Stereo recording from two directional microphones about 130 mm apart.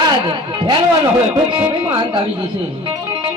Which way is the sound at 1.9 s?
40° right (ahead or behind).